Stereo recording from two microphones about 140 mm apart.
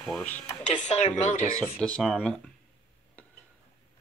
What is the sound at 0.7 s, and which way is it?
Speech, 60° left (ahead or behind).